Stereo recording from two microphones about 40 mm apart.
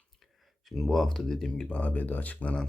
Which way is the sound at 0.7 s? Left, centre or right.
Centre.